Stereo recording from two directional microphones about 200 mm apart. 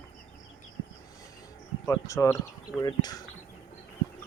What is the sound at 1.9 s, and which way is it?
Speech, 15° left (ahead or behind).